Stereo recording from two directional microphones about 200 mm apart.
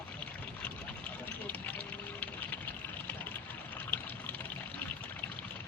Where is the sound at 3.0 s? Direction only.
10° left (ahead or behind).